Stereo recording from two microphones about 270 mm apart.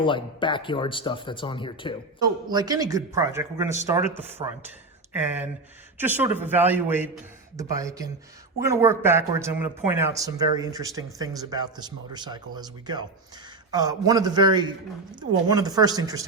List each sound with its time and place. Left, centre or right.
0.0 s speech: centre
2.2 s speech: centre
5.1 s speech: centre